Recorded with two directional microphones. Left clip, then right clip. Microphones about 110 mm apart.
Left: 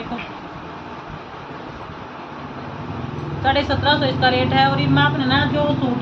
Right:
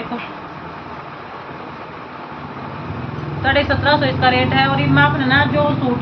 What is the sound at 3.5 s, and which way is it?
Speech, 15° left (ahead or behind).